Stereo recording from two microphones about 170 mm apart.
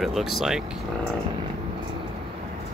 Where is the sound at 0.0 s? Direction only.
Centre (ahead or behind).